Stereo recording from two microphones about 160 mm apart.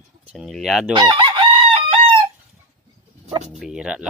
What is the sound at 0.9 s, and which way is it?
Chicken, 30° right (ahead or behind).